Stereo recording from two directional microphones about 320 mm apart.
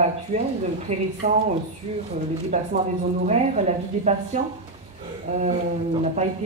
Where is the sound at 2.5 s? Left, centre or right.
Right.